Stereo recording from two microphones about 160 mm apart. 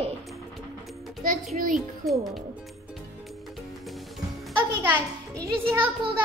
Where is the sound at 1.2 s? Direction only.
60° right (ahead or behind).